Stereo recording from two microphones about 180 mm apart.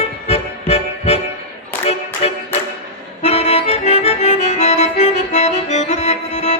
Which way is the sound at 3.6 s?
35° left (ahead or behind).